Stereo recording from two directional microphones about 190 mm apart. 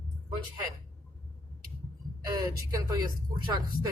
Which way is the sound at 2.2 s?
20° right (ahead or behind).